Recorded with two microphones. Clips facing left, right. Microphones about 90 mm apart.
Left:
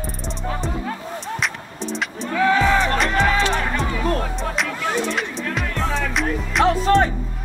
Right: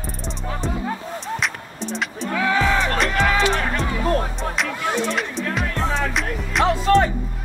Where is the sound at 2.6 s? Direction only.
35° left (ahead or behind).